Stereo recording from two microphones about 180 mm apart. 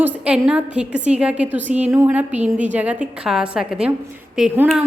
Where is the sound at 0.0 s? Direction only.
5° right (ahead or behind).